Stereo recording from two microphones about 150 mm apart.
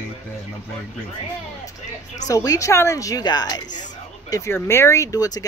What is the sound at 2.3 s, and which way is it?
Speech, 20° left (ahead or behind).